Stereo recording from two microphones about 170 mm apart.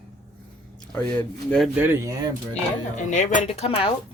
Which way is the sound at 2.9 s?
45° left (ahead or behind).